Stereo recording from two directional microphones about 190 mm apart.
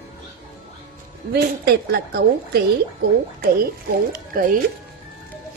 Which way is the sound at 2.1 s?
55° right (ahead or behind).